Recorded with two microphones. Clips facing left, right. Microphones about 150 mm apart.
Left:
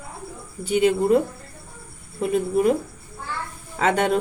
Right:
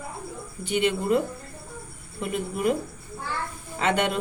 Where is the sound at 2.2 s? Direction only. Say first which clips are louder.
Left 7 dB; 35° left (ahead or behind).